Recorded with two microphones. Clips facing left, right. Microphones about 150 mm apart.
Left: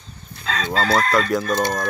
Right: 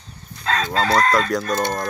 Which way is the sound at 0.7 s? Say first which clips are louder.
Even; 5° left (ahead or behind).